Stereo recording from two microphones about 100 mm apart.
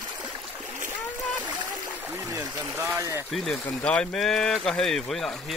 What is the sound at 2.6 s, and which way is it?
Speech, 25° right (ahead or behind).